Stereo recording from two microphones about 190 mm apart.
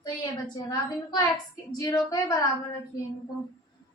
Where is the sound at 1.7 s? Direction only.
20° left (ahead or behind).